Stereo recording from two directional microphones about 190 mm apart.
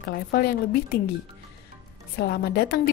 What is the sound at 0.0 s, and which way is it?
Speech, 55° left (ahead or behind).